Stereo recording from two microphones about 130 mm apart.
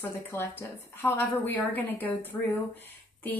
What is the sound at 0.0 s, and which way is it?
A woman's voice, 15° left (ahead or behind).